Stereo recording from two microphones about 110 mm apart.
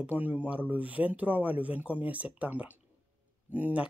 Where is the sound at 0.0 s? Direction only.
15° right (ahead or behind).